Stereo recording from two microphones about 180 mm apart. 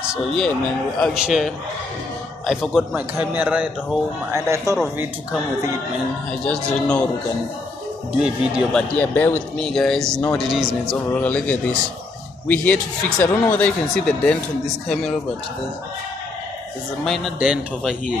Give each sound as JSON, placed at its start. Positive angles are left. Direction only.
{"t": 0.0, "sound": "a man's voice", "side_deg": 0}
{"t": 4.7, "sound": "speech", "side_deg": -15}
{"t": 6.4, "sound": "a man's voice", "side_deg": 5}
{"t": 8.2, "sound": "a man's voice", "side_deg": -5}
{"t": 8.9, "sound": "a man's voice", "side_deg": 10}
{"t": 17.0, "sound": "a man's voice", "side_deg": 0}